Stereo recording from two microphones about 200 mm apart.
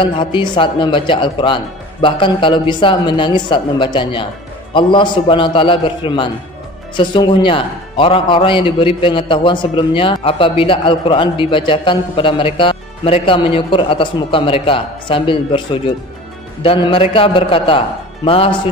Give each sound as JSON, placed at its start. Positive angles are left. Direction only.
{"t": 0.0, "sound": "a man's voice", "side_deg": 25}
{"t": 16.6, "sound": "a man's voice", "side_deg": 25}